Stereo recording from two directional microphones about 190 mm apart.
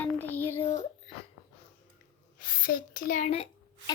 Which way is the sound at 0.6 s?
30° left (ahead or behind).